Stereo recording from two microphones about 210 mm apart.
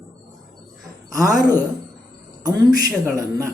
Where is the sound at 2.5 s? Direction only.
20° right (ahead or behind).